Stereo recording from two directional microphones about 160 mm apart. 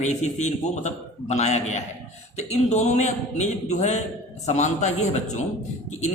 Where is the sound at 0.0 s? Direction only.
45° left (ahead or behind).